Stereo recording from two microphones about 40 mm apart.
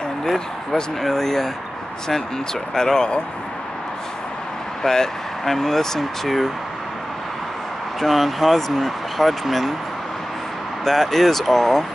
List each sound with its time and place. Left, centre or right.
1.0 s speech: centre
2.7 s speech: centre
4.8 s speech: centre
8.0 s speech: centre
10.9 s speech: centre